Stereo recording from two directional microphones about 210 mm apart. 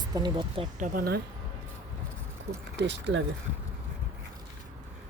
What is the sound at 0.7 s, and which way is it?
Speech, 40° right (ahead or behind).